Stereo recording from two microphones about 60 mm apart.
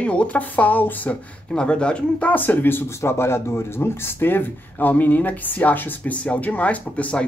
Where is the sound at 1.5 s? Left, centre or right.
Centre.